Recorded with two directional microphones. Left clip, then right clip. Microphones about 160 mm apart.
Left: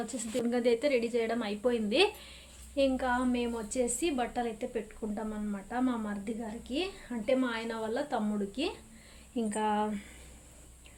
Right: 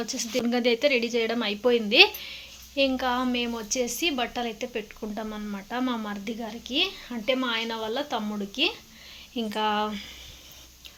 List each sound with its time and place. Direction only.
0.0 s speech: 15° right (ahead or behind)
0.3 s a woman's voice: 30° right (ahead or behind)
9.3 s speech: centre (ahead or behind)